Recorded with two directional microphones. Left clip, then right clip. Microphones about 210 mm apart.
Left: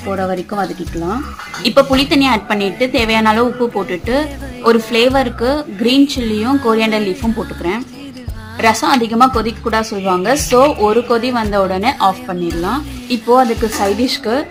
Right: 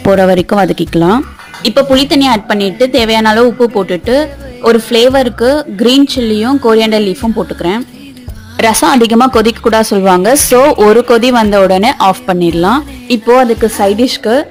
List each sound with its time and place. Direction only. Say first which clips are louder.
0.2 s speech: right 10 dB; 45° right (ahead or behind)
1.6 s a woman's voice: right 3 dB; 25° right (ahead or behind)
8.5 s a woman's voice: right 5 dB; 40° right (ahead or behind)
13.3 s a woman's voice: right 4 dB; 30° right (ahead or behind)